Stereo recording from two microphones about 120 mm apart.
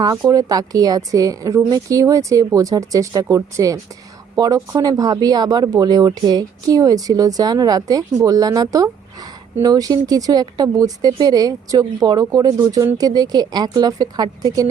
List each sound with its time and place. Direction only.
0.0 s a woman's voice: 30° right (ahead or behind)